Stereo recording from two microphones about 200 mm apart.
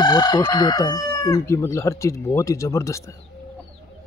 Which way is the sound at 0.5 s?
15° left (ahead or behind).